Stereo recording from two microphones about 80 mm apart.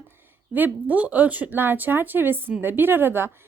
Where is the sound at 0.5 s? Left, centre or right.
Right.